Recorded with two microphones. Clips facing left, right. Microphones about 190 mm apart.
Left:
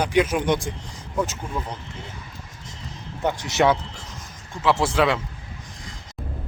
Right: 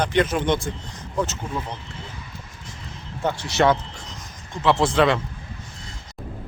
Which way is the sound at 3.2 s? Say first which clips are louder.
Even; 15° left (ahead or behind).